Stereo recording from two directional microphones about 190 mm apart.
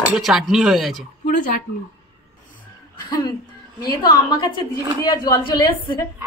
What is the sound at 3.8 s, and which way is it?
A woman's voice, 20° left (ahead or behind).